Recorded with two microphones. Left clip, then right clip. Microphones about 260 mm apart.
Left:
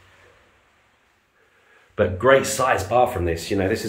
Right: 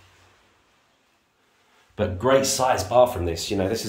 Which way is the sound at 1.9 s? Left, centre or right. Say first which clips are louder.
Left 4 dB; centre.